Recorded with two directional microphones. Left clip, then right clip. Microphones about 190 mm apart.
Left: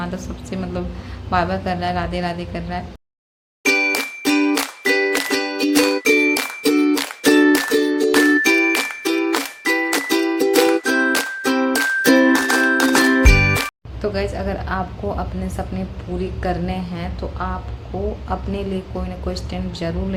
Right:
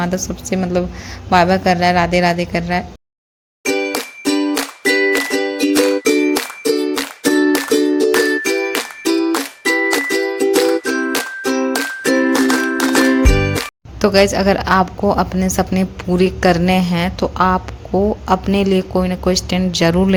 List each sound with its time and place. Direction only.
0.0 s a woman's voice: 35° right (ahead or behind)
3.6 s music: 5° right (ahead or behind)
14.0 s a woman's voice: 45° right (ahead or behind)